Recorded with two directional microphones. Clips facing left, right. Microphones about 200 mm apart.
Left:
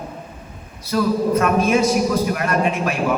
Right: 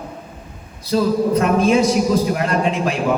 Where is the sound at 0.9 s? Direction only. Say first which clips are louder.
Right 2 dB; 30° right (ahead or behind).